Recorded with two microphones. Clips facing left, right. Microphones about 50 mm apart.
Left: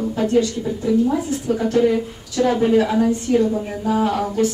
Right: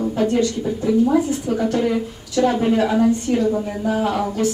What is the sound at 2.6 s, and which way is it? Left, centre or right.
Speech, centre.